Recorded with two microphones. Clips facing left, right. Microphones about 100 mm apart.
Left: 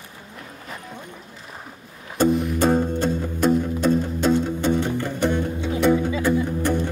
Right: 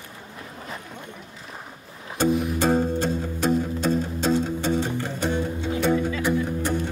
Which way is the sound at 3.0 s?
50° left (ahead or behind).